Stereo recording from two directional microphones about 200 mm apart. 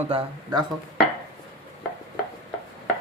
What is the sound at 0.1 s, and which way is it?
Speech, 25° right (ahead or behind).